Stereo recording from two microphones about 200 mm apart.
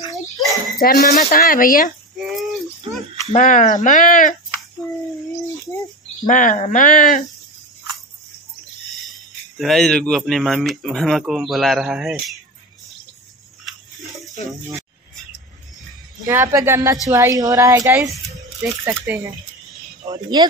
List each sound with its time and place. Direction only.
0.1 s a sound: centre (ahead or behind)
0.7 s speech: 45° left (ahead or behind)
2.1 s a sound: centre (ahead or behind)
3.3 s speech: 40° left (ahead or behind)
6.2 s speech: 40° left (ahead or behind)
9.6 s speech: centre (ahead or behind)
16.3 s speech: 15° right (ahead or behind)
19.0 s speech: 10° right (ahead or behind)
20.1 s speech: 20° right (ahead or behind)